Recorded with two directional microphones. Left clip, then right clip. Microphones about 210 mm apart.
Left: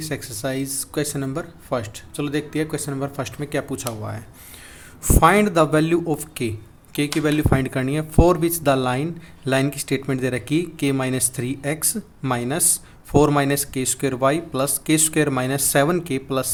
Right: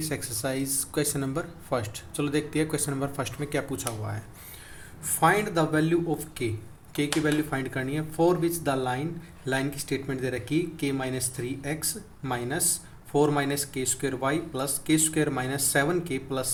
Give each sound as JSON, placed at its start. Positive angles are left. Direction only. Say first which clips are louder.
{"t": 0.0, "sound": "speech", "louder": "left 4 dB", "side_deg": 15}
{"t": 5.2, "sound": "speech", "louder": "left 7 dB", "side_deg": 40}